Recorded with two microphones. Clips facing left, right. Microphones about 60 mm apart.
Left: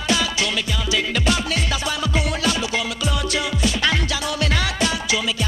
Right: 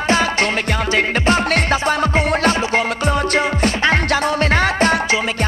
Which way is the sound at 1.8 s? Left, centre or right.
Right.